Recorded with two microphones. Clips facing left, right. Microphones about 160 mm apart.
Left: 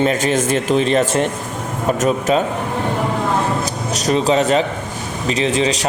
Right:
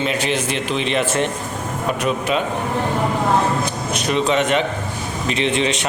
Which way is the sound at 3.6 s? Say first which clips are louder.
Left 2 dB; 40° left (ahead or behind).